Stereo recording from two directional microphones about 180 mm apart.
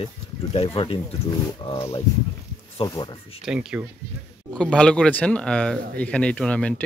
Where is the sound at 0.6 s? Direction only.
30° left (ahead or behind).